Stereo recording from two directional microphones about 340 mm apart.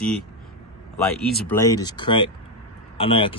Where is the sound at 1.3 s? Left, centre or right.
Centre.